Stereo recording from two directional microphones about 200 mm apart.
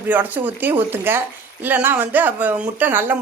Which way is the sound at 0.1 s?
10° right (ahead or behind).